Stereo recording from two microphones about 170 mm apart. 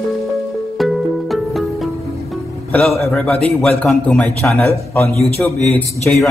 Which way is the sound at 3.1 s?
Centre (ahead or behind).